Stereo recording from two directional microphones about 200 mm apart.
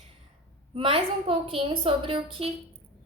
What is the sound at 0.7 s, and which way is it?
A woman's voice, 25° right (ahead or behind).